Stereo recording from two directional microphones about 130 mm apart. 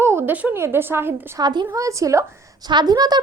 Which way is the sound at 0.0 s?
20° right (ahead or behind).